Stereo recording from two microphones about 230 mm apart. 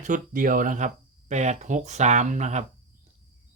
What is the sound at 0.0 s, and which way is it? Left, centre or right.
Speech, right.